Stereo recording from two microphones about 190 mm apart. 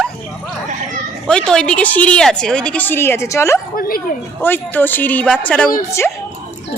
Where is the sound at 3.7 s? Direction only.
50° left (ahead or behind).